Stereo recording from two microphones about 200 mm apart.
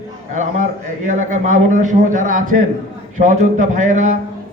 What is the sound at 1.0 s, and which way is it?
A man's voice, 40° right (ahead or behind).